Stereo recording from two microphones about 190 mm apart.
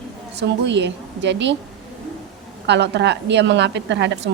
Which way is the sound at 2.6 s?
65° right (ahead or behind).